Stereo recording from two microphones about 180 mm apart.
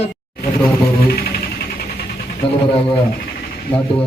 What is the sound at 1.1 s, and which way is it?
Music, 60° left (ahead or behind).